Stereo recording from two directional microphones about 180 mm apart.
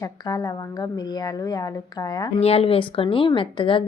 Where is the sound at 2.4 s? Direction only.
35° left (ahead or behind).